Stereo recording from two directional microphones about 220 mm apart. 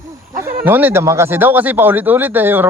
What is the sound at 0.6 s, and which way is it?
Speech, 10° right (ahead or behind).